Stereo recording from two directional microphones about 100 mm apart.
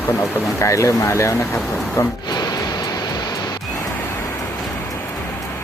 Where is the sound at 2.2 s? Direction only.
40° left (ahead or behind).